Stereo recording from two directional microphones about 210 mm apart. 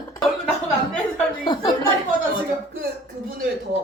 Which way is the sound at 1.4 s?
20° left (ahead or behind).